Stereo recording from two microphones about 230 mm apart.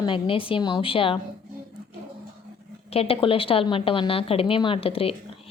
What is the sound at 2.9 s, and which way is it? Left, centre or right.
Speech, left.